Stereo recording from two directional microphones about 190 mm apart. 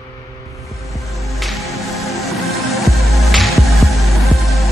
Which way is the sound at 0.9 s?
Centre (ahead or behind).